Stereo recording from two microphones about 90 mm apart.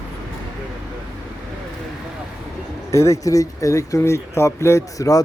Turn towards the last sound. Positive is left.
turn(degrees=40)  # may be behind; listen again after turning